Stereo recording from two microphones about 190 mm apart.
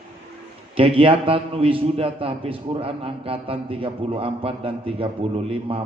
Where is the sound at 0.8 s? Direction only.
30° right (ahead or behind).